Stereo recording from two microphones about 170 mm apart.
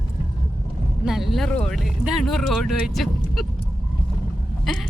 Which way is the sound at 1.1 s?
Centre (ahead or behind).